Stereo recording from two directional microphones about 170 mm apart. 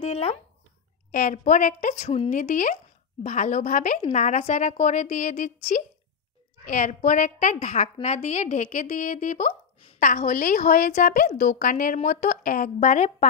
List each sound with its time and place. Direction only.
0.0 s a sound: 35° left (ahead or behind)
1.1 s a woman's voice: 50° left (ahead or behind)
9.9 s a woman's voice: 50° left (ahead or behind)